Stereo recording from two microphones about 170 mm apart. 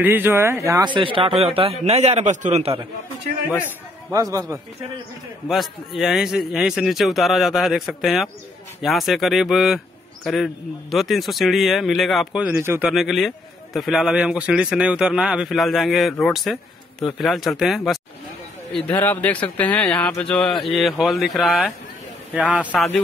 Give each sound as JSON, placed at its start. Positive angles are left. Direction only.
{"t": 0.0, "sound": "a man's voice", "side_deg": -10}
{"t": 4.1, "sound": "a man's voice", "side_deg": -20}
{"t": 5.5, "sound": "a man's voice", "side_deg": 0}
{"t": 12.9, "sound": "a man's voice", "side_deg": 0}
{"t": 22.7, "sound": "a man's voice", "side_deg": 5}